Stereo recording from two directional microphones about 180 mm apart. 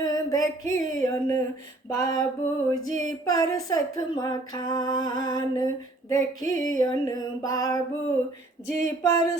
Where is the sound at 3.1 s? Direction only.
20° left (ahead or behind).